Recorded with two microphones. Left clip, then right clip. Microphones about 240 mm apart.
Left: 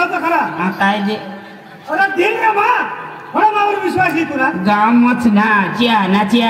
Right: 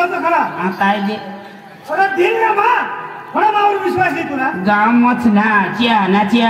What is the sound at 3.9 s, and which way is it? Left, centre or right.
A man's voice, left.